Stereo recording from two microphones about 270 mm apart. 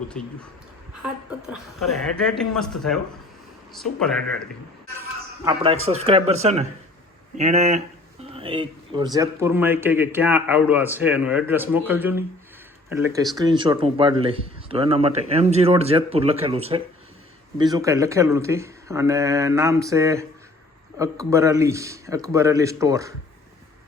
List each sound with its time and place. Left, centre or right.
0.1 s a woman's voice: centre
5.8 s a man's voice: right